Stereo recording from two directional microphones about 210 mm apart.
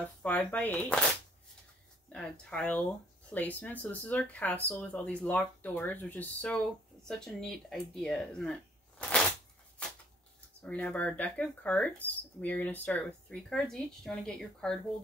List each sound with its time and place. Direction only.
0.0 s speech: 5° left (ahead or behind)
2.1 s speech: 5° left (ahead or behind)
10.6 s speech: 5° left (ahead or behind)